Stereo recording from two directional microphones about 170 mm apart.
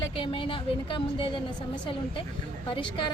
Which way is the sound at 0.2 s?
30° left (ahead or behind).